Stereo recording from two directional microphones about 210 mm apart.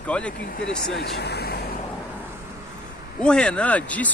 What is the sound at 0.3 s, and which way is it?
Speech, 45° left (ahead or behind).